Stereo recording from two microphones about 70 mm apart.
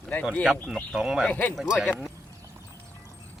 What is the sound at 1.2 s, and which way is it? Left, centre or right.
Speech, left.